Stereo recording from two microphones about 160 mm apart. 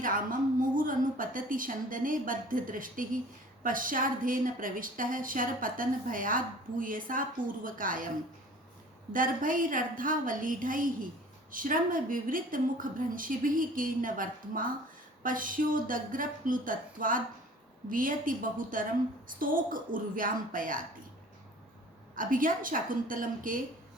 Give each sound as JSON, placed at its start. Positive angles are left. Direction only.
{"t": 0.0, "sound": "a woman's voice", "side_deg": -60}
{"t": 9.1, "sound": "a woman's voice", "side_deg": -60}
{"t": 22.1, "sound": "a woman's voice", "side_deg": -60}